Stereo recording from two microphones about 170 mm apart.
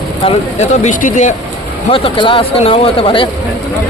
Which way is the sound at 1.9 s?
30° left (ahead or behind).